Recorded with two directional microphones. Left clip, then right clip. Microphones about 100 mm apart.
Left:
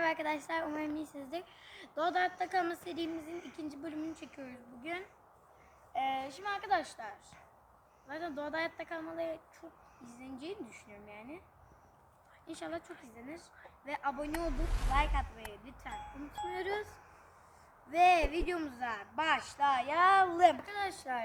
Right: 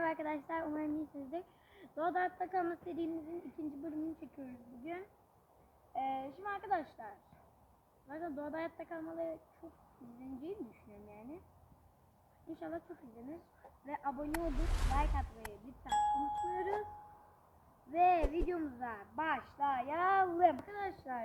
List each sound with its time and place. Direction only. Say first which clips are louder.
0.0 s a woman's voice: left 4 dB; 20° left (ahead or behind)
11.1 s a woman's voice: left 3 dB; 20° left (ahead or behind)
12.5 s speech: left 3 dB; 10° left (ahead or behind)
13.8 s speech: left 4 dB; 15° left (ahead or behind)
14.3 s speech: left 2 dB; centre (ahead or behind)
14.9 s speech: left 6 dB; 15° left (ahead or behind)
17.9 s speech: left 4 dB; 15° left (ahead or behind)